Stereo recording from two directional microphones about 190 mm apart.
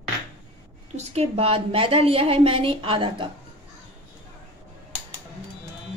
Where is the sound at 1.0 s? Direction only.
30° right (ahead or behind).